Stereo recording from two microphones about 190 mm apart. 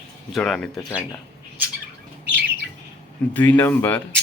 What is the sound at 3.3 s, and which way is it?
Speech, 10° left (ahead or behind).